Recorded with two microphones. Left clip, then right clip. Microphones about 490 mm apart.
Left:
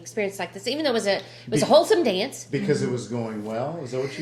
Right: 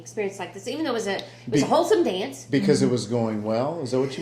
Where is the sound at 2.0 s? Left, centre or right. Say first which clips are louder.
Left 3 dB; left.